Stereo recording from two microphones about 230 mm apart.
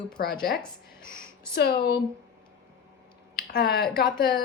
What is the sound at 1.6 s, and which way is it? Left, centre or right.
Speech, left.